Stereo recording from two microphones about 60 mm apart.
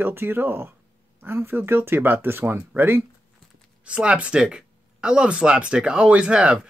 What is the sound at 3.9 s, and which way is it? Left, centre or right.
Speech, centre.